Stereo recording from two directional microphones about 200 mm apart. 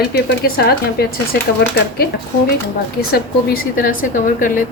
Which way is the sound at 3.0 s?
50° left (ahead or behind).